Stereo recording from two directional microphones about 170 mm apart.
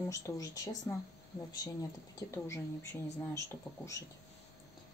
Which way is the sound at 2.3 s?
15° left (ahead or behind).